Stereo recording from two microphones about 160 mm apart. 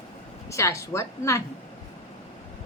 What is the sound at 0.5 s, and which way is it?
Speech, 20° left (ahead or behind).